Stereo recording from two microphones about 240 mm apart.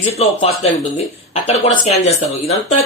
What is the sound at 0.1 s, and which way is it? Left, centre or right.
A man's voice, left.